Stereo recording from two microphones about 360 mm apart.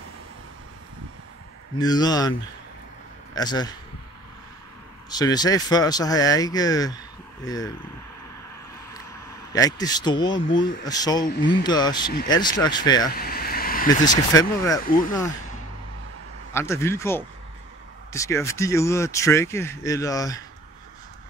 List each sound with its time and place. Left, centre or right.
1.8 s speech: centre
3.3 s speech: centre
5.1 s speech: centre
9.5 s speech: centre
13.1 s vehicle: left
13.8 s speech: centre
16.5 s speech: centre